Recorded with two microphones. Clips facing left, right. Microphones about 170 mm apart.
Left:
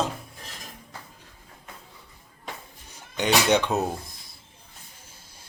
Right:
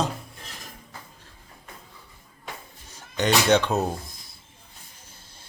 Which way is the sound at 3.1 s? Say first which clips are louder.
Right 1 dB; 10° left (ahead or behind).